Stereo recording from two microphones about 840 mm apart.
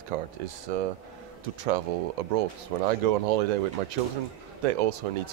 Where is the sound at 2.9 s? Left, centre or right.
Right.